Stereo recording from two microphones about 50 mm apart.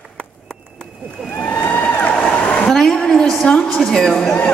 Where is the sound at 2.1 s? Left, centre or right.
Left.